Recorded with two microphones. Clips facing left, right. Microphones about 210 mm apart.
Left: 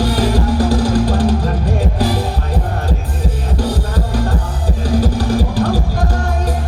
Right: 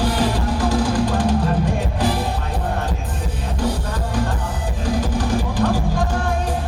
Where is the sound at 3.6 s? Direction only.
35° left (ahead or behind).